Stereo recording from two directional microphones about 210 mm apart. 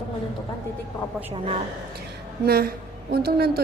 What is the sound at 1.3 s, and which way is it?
Speech, 25° right (ahead or behind).